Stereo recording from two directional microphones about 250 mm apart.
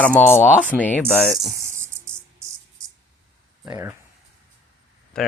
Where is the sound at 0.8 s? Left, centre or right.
Centre.